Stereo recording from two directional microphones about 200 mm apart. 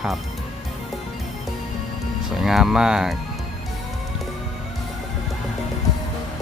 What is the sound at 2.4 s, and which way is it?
Speech, centre (ahead or behind).